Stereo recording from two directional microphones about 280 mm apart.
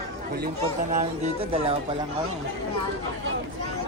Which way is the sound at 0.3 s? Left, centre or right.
Right.